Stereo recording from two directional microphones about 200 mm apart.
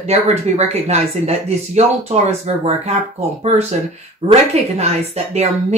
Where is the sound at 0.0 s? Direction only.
30° right (ahead or behind).